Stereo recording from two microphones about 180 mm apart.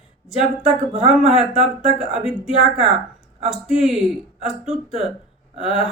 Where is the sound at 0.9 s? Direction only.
40° right (ahead or behind).